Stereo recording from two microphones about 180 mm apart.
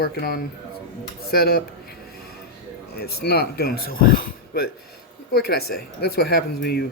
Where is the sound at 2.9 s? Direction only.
60° left (ahead or behind).